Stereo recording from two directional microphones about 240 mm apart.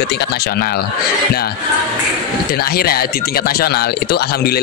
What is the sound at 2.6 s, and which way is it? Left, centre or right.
Speech, left.